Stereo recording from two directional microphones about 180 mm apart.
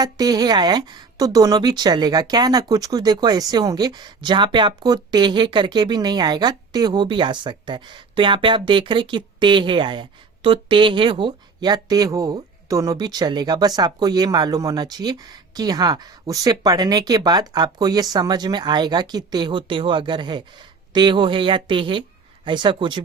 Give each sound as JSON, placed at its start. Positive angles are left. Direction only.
{"t": 0.0, "sound": "speech", "side_deg": -20}